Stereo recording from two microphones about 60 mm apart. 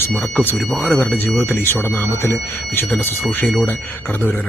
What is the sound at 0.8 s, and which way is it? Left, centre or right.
Speech, left.